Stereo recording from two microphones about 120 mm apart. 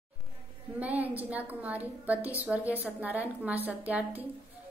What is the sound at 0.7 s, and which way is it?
A woman's voice, 15° right (ahead or behind).